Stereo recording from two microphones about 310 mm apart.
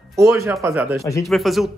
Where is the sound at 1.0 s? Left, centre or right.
Centre.